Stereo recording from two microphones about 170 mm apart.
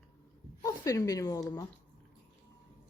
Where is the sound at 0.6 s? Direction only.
20° left (ahead or behind).